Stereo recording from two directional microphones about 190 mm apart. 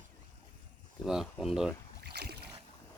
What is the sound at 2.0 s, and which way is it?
Boat, 60° right (ahead or behind).